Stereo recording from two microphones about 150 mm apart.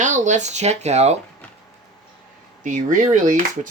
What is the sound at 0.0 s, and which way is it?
Speech, 55° right (ahead or behind).